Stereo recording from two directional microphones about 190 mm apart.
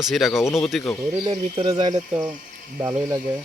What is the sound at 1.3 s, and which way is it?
Ratchet, 25° right (ahead or behind).